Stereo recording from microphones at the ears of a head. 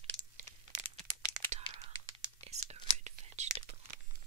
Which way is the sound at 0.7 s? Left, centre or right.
Right.